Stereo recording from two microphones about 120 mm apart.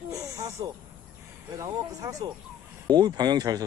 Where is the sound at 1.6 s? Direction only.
25° right (ahead or behind).